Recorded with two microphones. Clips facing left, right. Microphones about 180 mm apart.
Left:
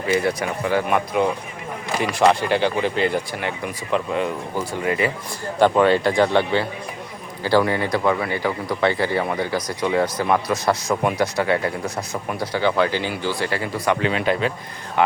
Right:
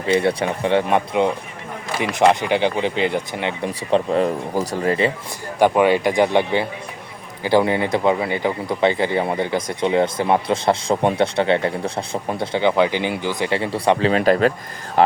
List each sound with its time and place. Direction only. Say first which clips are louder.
0.1 s a man's voice: right 3 dB; 30° right (ahead or behind)
3.7 s speech: right 6 dB; 35° right (ahead or behind)
5.5 s a man's voice: right 1 dB; 15° right (ahead or behind); by 15.1 s 35° right (ahead or behind)